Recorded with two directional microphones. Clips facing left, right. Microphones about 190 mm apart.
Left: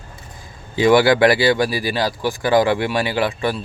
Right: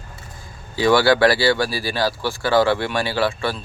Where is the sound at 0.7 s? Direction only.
20° left (ahead or behind).